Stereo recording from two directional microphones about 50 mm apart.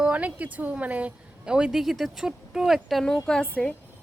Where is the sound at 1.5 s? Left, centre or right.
Centre.